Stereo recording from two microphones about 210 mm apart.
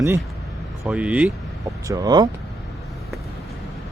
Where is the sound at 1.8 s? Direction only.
15° right (ahead or behind).